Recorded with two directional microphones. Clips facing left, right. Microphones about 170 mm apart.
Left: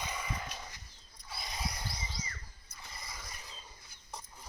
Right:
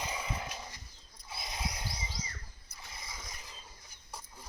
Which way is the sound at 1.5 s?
15° right (ahead or behind).